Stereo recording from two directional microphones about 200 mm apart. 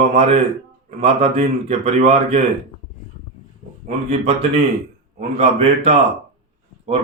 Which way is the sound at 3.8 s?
35° right (ahead or behind).